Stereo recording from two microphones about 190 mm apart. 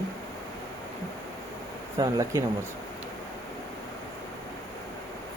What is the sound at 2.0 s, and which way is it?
Speech, 15° right (ahead or behind).